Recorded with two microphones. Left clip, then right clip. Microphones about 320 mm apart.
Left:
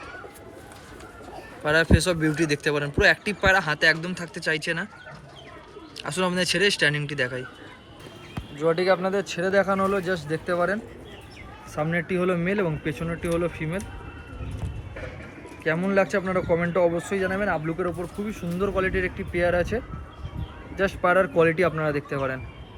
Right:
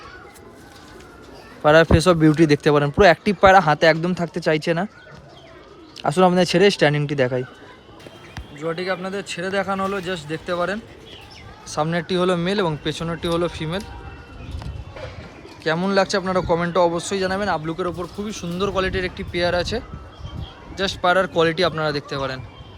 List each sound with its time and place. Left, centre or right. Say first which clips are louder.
1.6 s speech: right 8 dB; right
6.0 s speech: right 9 dB; right
8.5 s speech: left 4 dB; centre
15.6 s speech: right 3 dB; centre